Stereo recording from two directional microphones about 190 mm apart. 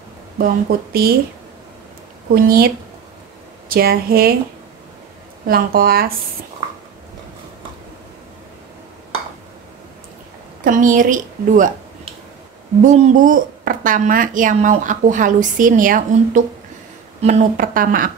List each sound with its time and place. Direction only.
0.4 s speech: 50° right (ahead or behind)
2.3 s speech: 50° right (ahead or behind)
5.5 s speech: 50° right (ahead or behind)
10.6 s speech: 45° right (ahead or behind)
12.8 s speech: 40° right (ahead or behind)